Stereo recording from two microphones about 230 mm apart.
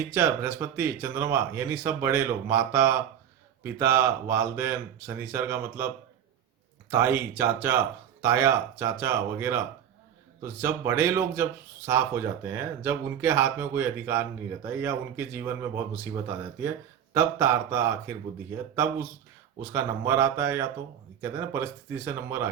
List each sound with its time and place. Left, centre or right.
0.1 s speech: centre
6.9 s speech: centre
17.2 s speech: centre
19.7 s speech: centre